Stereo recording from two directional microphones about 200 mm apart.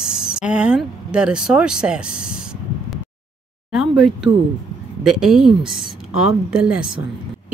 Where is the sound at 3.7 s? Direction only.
5° right (ahead or behind).